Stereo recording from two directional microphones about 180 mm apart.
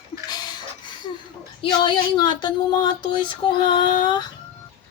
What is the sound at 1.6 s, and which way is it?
A woman's voice, 25° left (ahead or behind).